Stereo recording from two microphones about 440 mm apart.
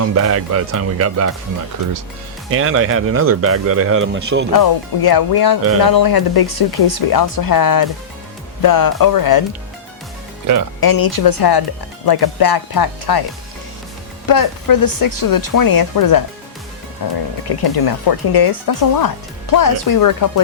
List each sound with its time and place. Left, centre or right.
0.0 s speech: right
2.5 s speech: right
4.5 s speech: left
10.4 s speech: right
10.8 s speech: left
14.3 s speech: left